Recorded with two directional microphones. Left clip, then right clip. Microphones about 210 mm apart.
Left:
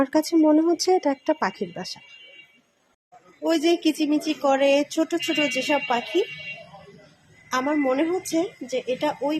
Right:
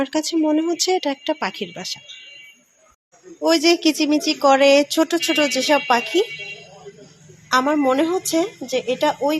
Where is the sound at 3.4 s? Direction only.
20° right (ahead or behind).